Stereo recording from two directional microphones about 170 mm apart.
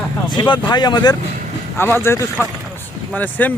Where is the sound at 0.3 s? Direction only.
25° left (ahead or behind).